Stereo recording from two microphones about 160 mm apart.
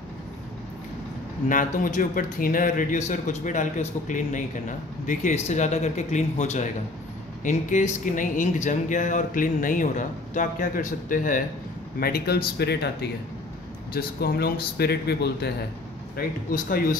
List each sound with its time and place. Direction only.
1.5 s speech: 55° left (ahead or behind)
12.0 s speech: 75° left (ahead or behind); by 15.5 s 90° left
16.2 s speech: 65° left (ahead or behind)